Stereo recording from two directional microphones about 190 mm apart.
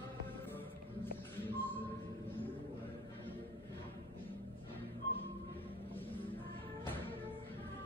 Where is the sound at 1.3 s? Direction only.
10° left (ahead or behind).